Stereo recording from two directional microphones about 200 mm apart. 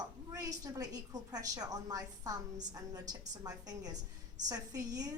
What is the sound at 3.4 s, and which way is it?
A woman's voice, 20° right (ahead or behind).